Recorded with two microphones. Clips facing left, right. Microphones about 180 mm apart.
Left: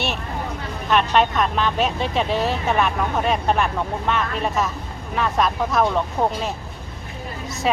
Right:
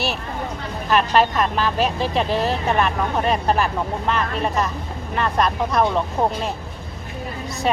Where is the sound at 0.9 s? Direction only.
Centre (ahead or behind).